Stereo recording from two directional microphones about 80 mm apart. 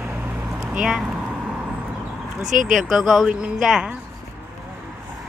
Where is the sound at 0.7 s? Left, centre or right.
Centre.